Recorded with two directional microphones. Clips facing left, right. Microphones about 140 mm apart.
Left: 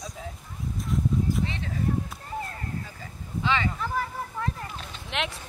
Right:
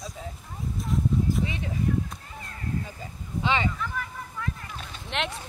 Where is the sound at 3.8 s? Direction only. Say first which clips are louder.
Left 4 dB; 35° left (ahead or behind).